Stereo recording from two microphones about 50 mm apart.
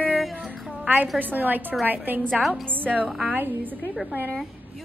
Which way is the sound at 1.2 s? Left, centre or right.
Right.